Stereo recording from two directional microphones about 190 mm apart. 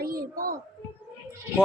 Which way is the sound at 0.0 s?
50° right (ahead or behind).